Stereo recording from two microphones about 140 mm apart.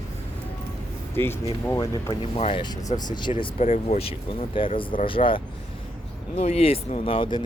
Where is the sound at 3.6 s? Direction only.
50° left (ahead or behind).